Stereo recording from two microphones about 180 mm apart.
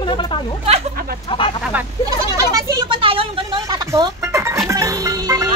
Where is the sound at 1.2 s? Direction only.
30° left (ahead or behind).